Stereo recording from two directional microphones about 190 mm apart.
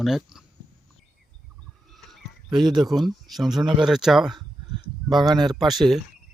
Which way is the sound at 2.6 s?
20° right (ahead or behind).